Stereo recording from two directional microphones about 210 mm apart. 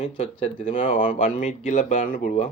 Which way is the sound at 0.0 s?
30° left (ahead or behind).